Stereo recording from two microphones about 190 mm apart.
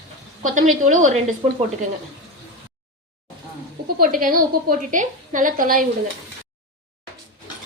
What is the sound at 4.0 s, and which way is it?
A woman's voice, 45° right (ahead or behind).